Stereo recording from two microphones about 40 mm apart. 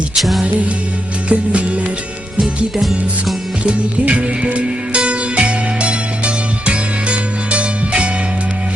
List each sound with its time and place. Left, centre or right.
0.2 s music: centre
1.3 s music: right
3.6 s music: right